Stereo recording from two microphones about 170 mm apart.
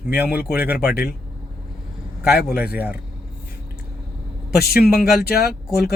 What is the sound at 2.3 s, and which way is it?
Speech, 65° left (ahead or behind).